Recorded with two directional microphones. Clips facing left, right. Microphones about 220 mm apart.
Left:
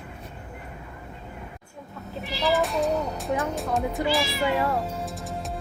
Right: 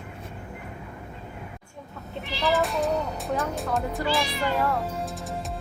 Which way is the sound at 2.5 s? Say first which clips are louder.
Left 1 dB; centre (ahead or behind).